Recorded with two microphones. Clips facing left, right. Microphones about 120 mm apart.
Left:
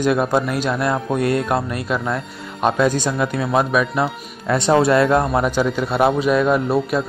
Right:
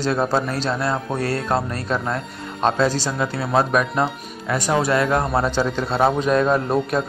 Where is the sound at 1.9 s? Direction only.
Centre (ahead or behind).